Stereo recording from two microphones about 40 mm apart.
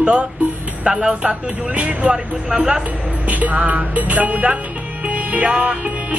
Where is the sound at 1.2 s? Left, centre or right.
Right.